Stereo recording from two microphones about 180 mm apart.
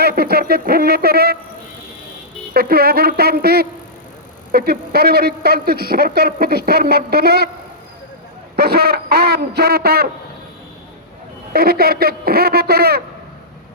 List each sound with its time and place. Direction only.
0.0 s a man's voice: 60° right (ahead or behind)
2.5 s a man's voice: 55° right (ahead or behind)
8.5 s a man's voice: 60° right (ahead or behind)
11.5 s a man's voice: 60° right (ahead or behind)